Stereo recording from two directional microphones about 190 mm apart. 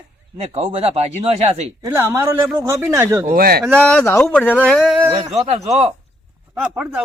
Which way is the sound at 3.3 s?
55° right (ahead or behind).